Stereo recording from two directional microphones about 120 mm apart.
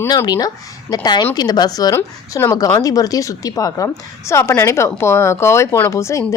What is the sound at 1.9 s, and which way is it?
Speech, 20° left (ahead or behind).